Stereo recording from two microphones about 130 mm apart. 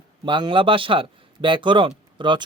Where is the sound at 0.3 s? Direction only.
40° right (ahead or behind).